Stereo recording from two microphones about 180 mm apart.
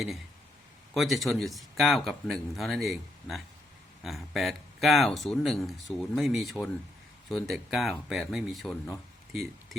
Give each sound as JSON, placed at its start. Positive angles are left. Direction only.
{"t": 0.9, "sound": "speech", "side_deg": 0}